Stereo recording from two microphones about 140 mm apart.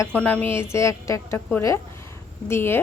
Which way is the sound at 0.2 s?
10° left (ahead or behind).